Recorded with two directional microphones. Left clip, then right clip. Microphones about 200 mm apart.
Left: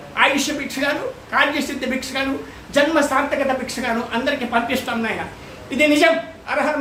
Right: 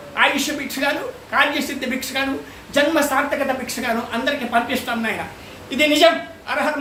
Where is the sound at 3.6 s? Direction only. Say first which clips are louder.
Even; 5° right (ahead or behind).